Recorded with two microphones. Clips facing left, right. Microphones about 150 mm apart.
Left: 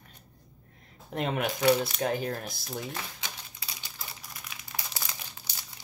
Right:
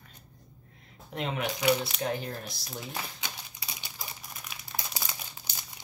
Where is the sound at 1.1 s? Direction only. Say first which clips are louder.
Left 3 dB; 50° left (ahead or behind).